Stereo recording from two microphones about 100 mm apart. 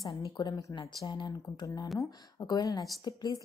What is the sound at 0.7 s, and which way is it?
A woman's voice, 50° left (ahead or behind).